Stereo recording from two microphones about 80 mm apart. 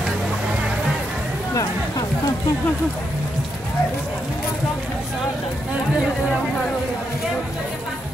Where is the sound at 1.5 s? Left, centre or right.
Left.